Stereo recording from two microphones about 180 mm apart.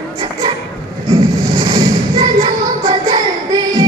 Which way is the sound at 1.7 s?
30° right (ahead or behind).